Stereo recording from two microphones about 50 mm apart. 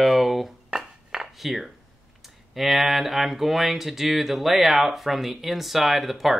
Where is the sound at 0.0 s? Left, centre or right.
Centre.